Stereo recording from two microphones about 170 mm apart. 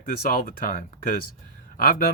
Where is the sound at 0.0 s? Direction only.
55° left (ahead or behind).